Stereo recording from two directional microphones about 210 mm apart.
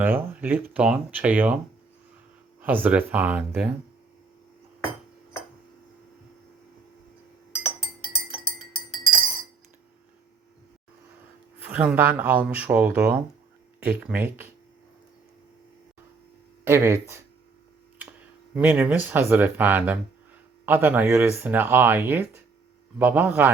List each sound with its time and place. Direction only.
0.0 s speech: 10° right (ahead or behind)
2.6 s speech: 10° right (ahead or behind)
11.6 s speech: 10° right (ahead or behind)
16.6 s speech: 10° right (ahead or behind)
18.5 s speech: 5° right (ahead or behind)